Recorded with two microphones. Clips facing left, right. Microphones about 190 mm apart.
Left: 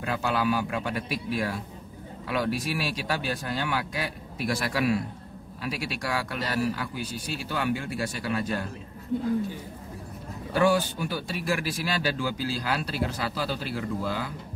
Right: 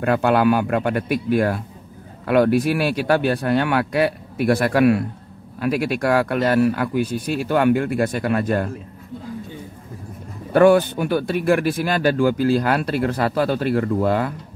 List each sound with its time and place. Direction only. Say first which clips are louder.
0.0 s speech: right 10 dB; 60° right (ahead or behind)
10.5 s speech: right 10 dB; 60° right (ahead or behind)